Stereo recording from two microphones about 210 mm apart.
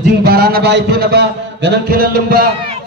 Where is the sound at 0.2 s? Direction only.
45° right (ahead or behind).